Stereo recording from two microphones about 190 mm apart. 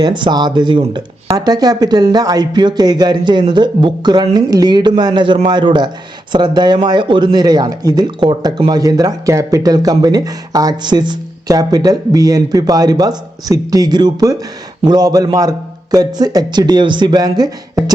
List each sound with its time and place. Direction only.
0.0 s speech: 25° right (ahead or behind)